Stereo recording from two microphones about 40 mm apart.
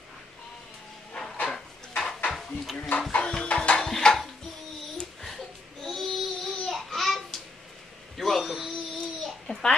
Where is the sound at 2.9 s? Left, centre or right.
Left.